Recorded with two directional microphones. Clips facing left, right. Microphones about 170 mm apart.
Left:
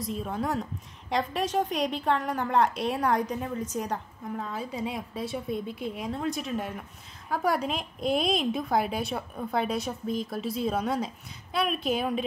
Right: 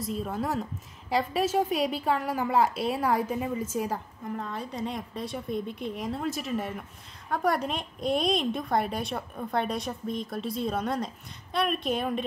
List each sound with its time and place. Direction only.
0.0 s a woman's voice: centre (ahead or behind)